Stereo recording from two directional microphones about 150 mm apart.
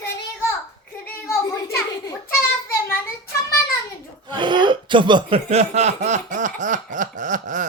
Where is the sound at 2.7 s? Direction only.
15° left (ahead or behind).